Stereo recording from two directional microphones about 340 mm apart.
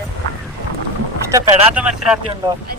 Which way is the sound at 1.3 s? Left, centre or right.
Centre.